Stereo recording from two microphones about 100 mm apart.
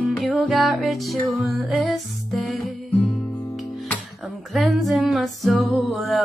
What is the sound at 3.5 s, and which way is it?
Music, centre (ahead or behind).